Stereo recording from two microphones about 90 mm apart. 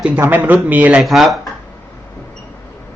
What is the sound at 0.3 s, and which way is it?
Speech, 20° right (ahead or behind).